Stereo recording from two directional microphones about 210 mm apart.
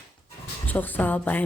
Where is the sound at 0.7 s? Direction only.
10° left (ahead or behind).